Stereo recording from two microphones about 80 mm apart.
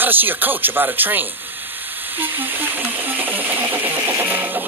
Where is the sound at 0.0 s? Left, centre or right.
Right.